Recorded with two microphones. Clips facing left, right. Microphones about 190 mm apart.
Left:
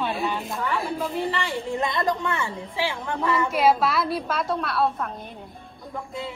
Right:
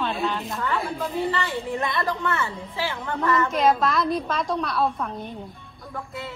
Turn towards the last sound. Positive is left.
turn(degrees=5)  # may be behind; listen again after turning